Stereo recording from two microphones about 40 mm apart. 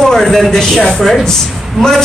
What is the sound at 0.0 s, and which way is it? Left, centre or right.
Speech, centre.